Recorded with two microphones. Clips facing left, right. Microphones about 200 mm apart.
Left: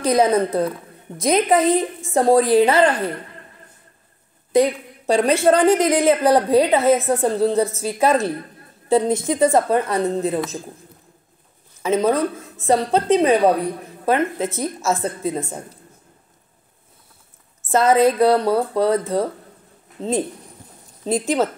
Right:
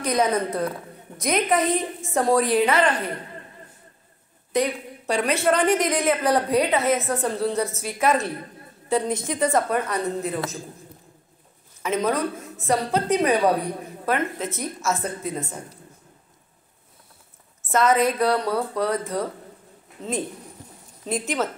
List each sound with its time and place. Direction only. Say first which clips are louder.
0.0 s a woman's voice: left 6 dB; 30° left (ahead or behind)
4.5 s a woman's voice: left 7 dB; 30° left (ahead or behind)
11.8 s a woman's voice: left 5 dB; 30° left (ahead or behind)
17.6 s a woman's voice: left 5 dB; 30° left (ahead or behind)